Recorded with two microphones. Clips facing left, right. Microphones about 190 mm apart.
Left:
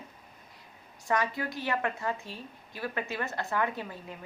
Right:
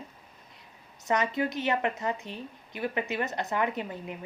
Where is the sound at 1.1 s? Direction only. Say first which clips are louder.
Right 3 dB; 20° right (ahead or behind).